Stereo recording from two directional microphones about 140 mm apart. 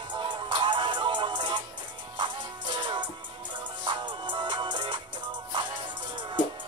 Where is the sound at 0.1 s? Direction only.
35° right (ahead or behind).